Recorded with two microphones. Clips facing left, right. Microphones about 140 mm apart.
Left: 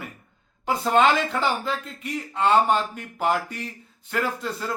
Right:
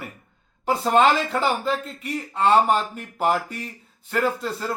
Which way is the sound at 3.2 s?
5° right (ahead or behind).